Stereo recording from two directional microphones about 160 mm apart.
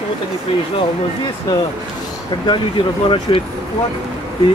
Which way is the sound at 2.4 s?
30° left (ahead or behind).